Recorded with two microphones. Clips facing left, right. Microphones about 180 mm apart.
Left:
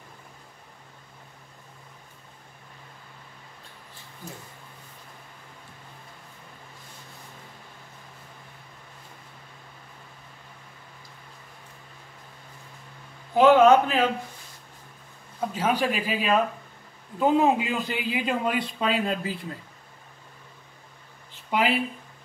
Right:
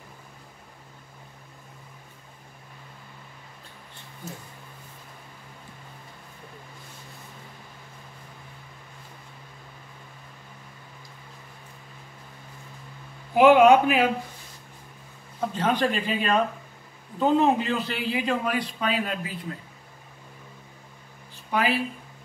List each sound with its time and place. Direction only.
13.3 s a man's voice: 15° right (ahead or behind)
15.5 s a man's voice: 10° left (ahead or behind); by 19.4 s 25° left (ahead or behind)
21.5 s speech: 20° left (ahead or behind)